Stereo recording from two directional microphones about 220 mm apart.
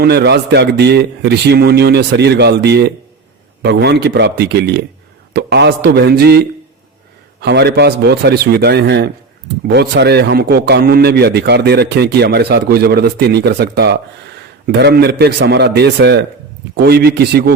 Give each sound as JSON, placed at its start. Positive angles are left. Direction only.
{"t": 0.0, "sound": "a man's voice", "side_deg": -50}
{"t": 7.4, "sound": "a man's voice", "side_deg": -50}